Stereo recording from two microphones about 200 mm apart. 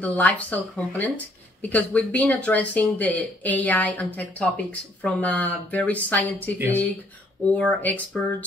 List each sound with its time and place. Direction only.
0.0 s speech: 5° left (ahead or behind)
7.5 s speech: 5° left (ahead or behind)